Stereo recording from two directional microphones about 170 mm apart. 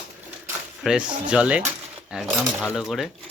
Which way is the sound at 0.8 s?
5° right (ahead or behind).